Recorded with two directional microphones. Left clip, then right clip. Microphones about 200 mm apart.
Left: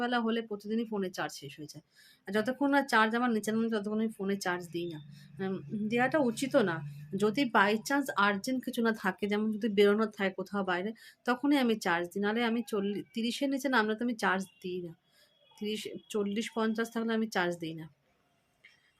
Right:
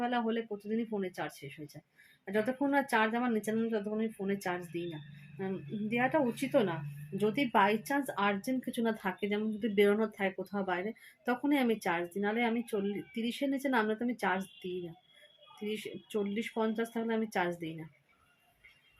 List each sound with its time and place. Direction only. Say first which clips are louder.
0.0 s speech: left 2 dB; 5° left (ahead or behind)